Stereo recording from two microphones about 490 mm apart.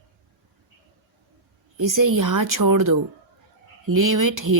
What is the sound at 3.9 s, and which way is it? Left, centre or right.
Speech, right.